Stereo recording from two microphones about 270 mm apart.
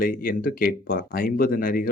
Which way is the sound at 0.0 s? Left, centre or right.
Left.